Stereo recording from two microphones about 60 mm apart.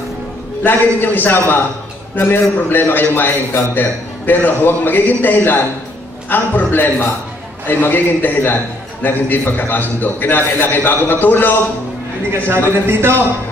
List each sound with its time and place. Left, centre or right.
0.7 s a man's voice: left
12.7 s a man's voice: right